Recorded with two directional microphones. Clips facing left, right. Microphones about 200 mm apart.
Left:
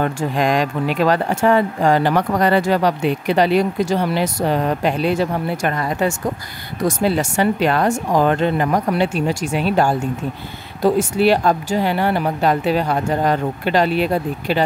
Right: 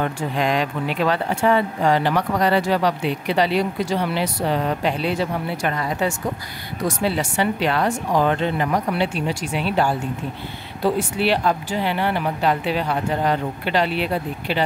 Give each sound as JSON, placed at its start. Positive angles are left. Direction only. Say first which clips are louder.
{"t": 0.0, "sound": "speech", "louder": "left 3 dB", "side_deg": 45}